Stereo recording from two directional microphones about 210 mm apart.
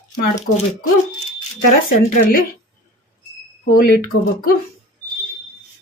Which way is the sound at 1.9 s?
45° left (ahead or behind).